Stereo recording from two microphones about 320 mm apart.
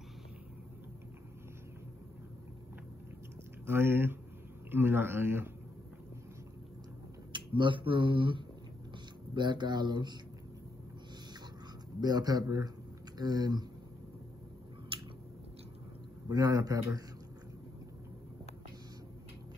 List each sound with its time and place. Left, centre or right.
3.6 s speech: centre
7.3 s speech: centre
12.0 s speech: centre
14.9 s chewing: centre
16.3 s speech: centre